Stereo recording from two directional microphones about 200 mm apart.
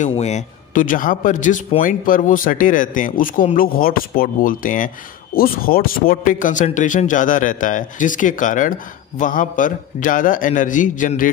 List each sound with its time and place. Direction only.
0.0 s a man's voice: 35° left (ahead or behind)